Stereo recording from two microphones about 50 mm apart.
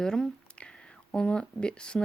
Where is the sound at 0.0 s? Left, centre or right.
Centre.